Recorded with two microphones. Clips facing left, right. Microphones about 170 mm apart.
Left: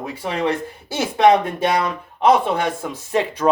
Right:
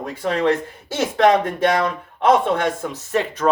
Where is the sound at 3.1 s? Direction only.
15° left (ahead or behind).